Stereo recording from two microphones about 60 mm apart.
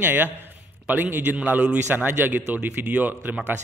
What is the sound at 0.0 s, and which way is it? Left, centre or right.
Speech, right.